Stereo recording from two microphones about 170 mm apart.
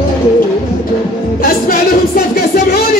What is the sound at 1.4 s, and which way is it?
Music, 60° left (ahead or behind).